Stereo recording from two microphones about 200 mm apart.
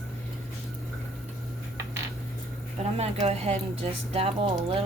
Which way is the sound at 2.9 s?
30° right (ahead or behind).